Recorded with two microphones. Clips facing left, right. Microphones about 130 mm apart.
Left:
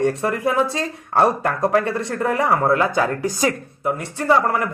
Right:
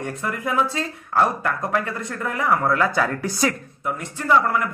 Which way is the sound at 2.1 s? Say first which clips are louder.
Left 3 dB; 30° left (ahead or behind).